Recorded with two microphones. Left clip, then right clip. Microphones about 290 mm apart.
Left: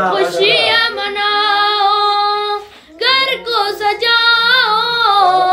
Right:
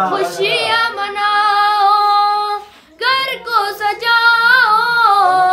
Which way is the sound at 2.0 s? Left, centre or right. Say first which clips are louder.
Right 1 dB; centre.